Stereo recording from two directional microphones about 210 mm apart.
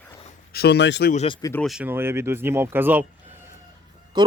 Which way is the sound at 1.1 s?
30° left (ahead or behind).